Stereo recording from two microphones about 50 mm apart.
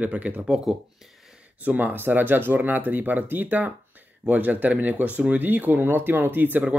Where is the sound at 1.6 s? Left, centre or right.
Right.